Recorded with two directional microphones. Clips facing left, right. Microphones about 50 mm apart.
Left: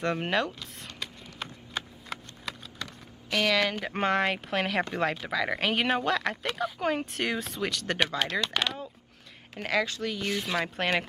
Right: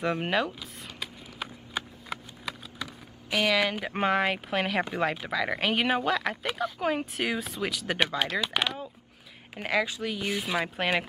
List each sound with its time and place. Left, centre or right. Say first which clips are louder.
0.0 s speech: right 1 dB; centre